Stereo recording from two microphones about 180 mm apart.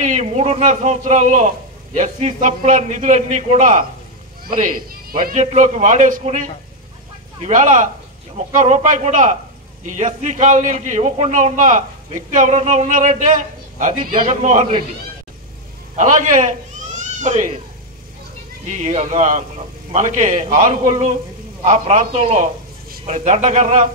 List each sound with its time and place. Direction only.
0.0 s a man's voice: 40° right (ahead or behind)
7.4 s a man's voice: 40° right (ahead or behind)
16.0 s speech: 45° right (ahead or behind)
18.8 s a man's voice: 35° right (ahead or behind)